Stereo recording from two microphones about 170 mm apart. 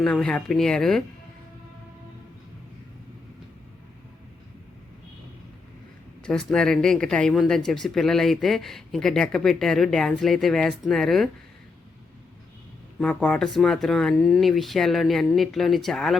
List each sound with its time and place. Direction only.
0.0 s speech: 5° left (ahead or behind)
6.2 s speech: 5° left (ahead or behind)
13.0 s speech: 5° left (ahead or behind)